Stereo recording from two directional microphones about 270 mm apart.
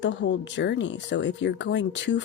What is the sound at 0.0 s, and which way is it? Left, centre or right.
Speech, left.